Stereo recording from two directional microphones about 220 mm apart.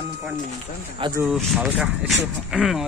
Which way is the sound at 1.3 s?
Centre (ahead or behind).